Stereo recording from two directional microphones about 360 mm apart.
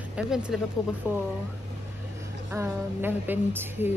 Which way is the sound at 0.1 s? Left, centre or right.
Centre.